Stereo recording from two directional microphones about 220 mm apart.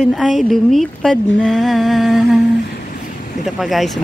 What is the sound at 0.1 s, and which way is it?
Speech, centre (ahead or behind).